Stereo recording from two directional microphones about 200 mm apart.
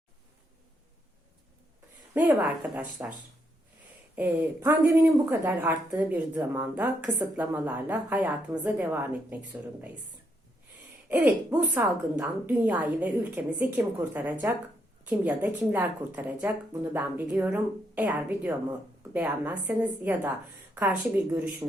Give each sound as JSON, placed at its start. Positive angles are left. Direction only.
{"t": 2.1, "sound": "speech", "side_deg": -10}
{"t": 11.1, "sound": "speech", "side_deg": -10}
{"t": 21.6, "sound": "speech", "side_deg": -15}